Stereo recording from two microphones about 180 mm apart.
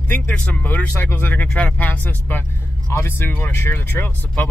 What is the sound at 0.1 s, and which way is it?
Speech, 10° left (ahead or behind).